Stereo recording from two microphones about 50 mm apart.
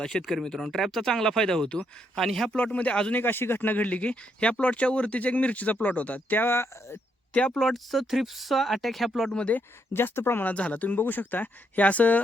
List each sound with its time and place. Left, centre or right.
0.0 s speech: centre
2.7 s speech: left
3.1 s speech: left
6.5 s speech: left
7.3 s speech: left
7.6 s speech: centre
9.9 s speech: left
10.5 s speech: left